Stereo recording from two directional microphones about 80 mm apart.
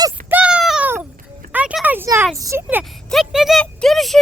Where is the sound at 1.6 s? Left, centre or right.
Centre.